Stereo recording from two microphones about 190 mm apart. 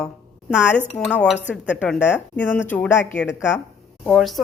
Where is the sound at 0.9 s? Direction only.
5° left (ahead or behind).